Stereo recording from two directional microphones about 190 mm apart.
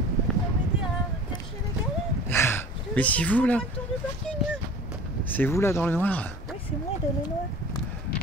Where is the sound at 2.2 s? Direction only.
10° left (ahead or behind).